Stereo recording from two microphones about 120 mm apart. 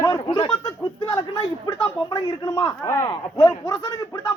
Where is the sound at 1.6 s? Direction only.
30° left (ahead or behind).